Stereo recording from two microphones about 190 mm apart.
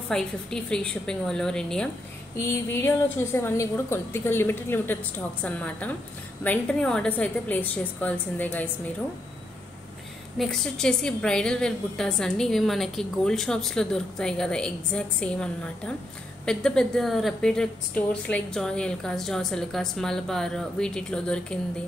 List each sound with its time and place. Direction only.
0.1 s a woman's voice: 5° left (ahead or behind)
10.3 s a woman's voice: centre (ahead or behind)